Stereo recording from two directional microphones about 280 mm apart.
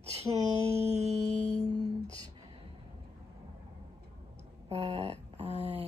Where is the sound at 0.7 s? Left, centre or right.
Right.